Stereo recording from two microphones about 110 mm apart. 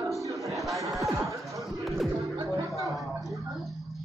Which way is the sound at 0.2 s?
30° right (ahead or behind).